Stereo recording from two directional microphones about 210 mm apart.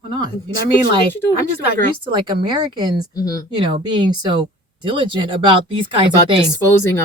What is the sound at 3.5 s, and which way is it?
Speech, 20° right (ahead or behind).